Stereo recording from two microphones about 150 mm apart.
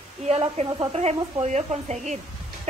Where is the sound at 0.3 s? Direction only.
45° right (ahead or behind).